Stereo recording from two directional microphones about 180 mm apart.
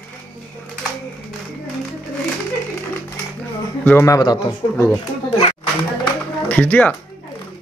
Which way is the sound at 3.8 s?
10° left (ahead or behind).